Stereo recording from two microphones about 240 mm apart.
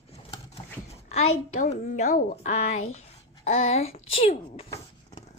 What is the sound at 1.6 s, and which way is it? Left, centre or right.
A woman's voice, left.